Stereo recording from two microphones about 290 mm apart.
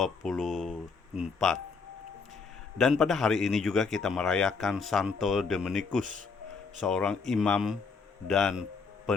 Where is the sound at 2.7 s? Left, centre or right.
Centre.